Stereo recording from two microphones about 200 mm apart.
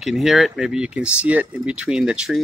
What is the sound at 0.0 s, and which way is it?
Speech, centre (ahead or behind).